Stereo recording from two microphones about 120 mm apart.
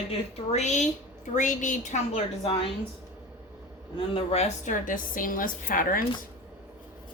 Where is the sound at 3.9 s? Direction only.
55° left (ahead or behind); by 5.0 s 80° left.